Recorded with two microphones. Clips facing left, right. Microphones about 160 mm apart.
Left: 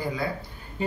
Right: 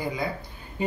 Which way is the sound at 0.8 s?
15° right (ahead or behind).